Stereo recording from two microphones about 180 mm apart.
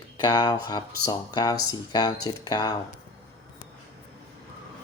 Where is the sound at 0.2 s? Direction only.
25° left (ahead or behind).